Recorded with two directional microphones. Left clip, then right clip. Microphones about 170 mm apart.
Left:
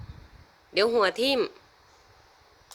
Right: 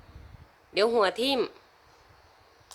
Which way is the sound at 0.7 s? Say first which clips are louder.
Left 1 dB; 5° right (ahead or behind).